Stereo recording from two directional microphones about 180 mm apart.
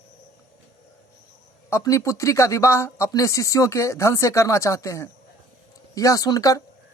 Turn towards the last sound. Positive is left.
turn(degrees=20)  # may be behind; listen again after turning